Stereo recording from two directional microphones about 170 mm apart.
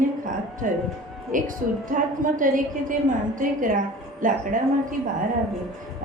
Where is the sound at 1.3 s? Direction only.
50° right (ahead or behind).